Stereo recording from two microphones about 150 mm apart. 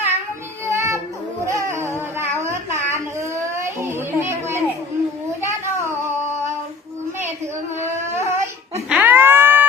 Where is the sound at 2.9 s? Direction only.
20° right (ahead or behind).